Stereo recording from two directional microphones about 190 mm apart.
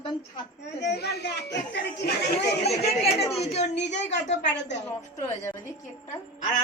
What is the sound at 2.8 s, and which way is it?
Speech, 35° left (ahead or behind).